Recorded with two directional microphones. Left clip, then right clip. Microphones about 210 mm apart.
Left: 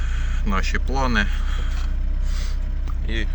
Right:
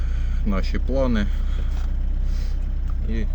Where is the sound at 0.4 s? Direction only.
10° right (ahead or behind).